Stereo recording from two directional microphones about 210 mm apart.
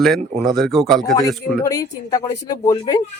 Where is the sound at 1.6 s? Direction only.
15° left (ahead or behind).